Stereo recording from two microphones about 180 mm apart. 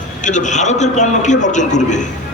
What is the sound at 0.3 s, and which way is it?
A man's voice, 40° left (ahead or behind).